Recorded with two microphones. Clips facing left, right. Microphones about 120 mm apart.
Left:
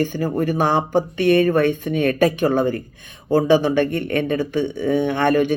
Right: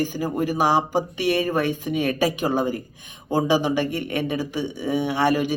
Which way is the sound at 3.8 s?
55° left (ahead or behind).